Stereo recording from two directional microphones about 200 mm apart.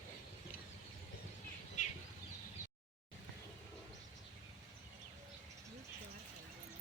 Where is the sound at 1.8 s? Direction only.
40° left (ahead or behind).